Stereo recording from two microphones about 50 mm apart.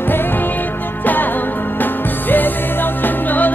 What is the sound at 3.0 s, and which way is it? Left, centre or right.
Music, left.